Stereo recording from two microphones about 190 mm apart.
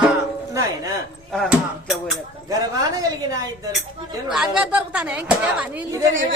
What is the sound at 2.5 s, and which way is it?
A woman's voice, 20° right (ahead or behind).